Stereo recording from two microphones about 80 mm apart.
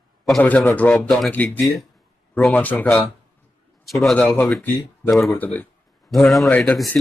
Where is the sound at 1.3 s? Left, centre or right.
Left.